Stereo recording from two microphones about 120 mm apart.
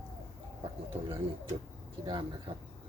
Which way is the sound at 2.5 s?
50° right (ahead or behind).